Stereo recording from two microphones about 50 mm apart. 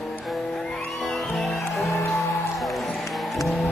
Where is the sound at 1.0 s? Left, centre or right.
Centre.